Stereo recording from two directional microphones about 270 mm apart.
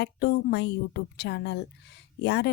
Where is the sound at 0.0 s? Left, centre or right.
Left.